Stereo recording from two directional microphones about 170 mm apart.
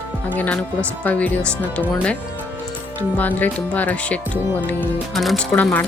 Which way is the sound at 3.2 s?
10° left (ahead or behind).